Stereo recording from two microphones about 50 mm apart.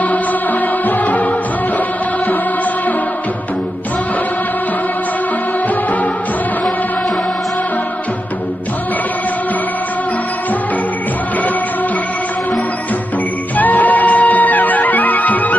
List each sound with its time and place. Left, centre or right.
0.8 s music: left
13.6 s music: left